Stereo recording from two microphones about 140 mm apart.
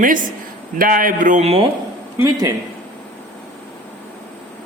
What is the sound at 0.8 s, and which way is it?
Speech, 85° right.